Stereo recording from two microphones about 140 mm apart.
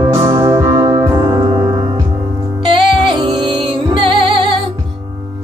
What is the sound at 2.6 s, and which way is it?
Music, 35° right (ahead or behind).